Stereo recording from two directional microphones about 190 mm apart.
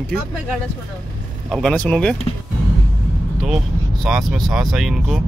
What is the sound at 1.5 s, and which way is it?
Speech, 5° left (ahead or behind).